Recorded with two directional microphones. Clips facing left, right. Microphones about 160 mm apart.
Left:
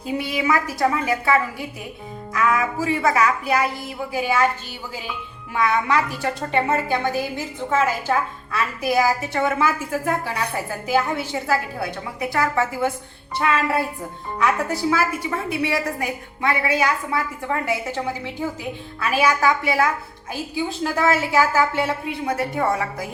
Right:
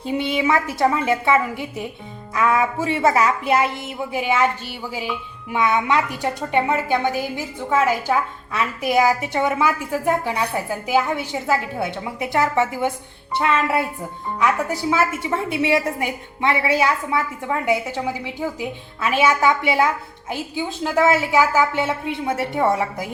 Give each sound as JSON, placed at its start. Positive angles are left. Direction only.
{"t": 0.0, "sound": "a woman's voice", "side_deg": -25}
{"t": 5.5, "sound": "a woman's voice", "side_deg": -20}
{"t": 14.3, "sound": "a woman's voice", "side_deg": -15}